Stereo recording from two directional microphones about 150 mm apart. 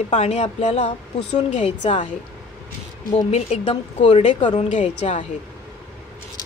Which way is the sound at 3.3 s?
45° left (ahead or behind).